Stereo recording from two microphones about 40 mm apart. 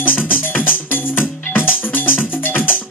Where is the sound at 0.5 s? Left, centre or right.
Left.